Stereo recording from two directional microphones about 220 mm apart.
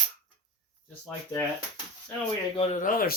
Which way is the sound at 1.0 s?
10° left (ahead or behind).